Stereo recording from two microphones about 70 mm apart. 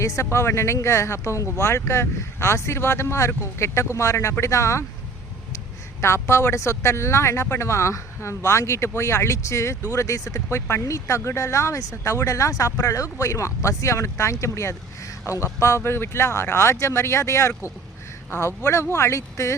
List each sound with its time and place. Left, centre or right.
0.0 s speech: left
6.0 s speech: left
15.6 s speech: left